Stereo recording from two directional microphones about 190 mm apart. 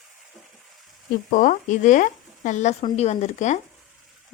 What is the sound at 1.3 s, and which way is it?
Speech, 40° left (ahead or behind).